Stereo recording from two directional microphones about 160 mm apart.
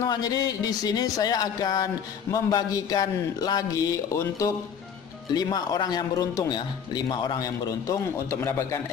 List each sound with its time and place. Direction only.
0.0 s speech: 25° left (ahead or behind)